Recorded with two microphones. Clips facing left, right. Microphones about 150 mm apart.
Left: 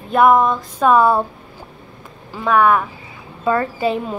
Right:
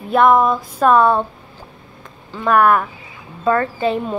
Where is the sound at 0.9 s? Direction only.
5° left (ahead or behind).